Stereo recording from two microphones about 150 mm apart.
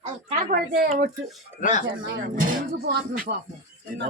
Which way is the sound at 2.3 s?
65° right (ahead or behind).